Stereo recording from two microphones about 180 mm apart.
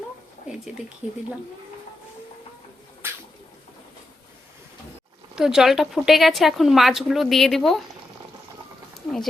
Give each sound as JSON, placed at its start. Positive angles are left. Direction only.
{"t": 1.0, "sound": "a woman's voice", "side_deg": -5}
{"t": 3.0, "sound": "a sound", "side_deg": -10}
{"t": 5.3, "sound": "a woman's voice", "side_deg": -5}